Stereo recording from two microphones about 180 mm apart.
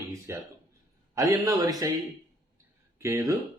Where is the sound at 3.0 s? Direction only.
15° right (ahead or behind).